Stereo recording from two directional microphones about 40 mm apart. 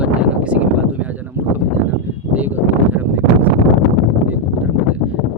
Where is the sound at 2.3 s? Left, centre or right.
Right.